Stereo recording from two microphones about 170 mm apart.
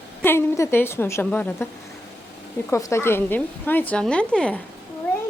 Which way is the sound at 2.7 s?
15° left (ahead or behind).